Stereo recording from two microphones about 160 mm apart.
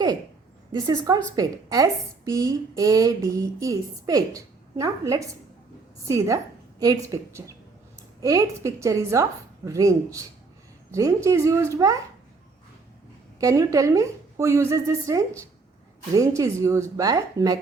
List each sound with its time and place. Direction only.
0.7 s a woman's voice: 25° right (ahead or behind)
13.4 s a woman's voice: 20° right (ahead or behind)